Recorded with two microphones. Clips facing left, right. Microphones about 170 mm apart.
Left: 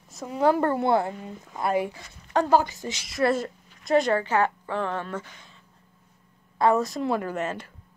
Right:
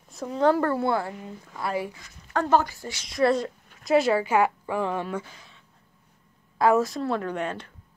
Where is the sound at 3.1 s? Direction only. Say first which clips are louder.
Right 2 dB; 5° left (ahead or behind).